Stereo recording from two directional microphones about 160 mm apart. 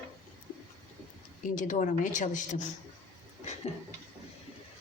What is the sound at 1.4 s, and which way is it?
A woman's voice, 55° left (ahead or behind).